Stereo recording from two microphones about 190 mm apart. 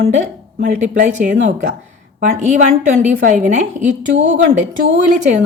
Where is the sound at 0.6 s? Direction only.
45° right (ahead or behind).